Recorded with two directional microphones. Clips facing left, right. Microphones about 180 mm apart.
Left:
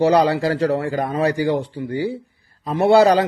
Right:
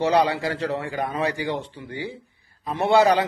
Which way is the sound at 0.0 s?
35° left (ahead or behind).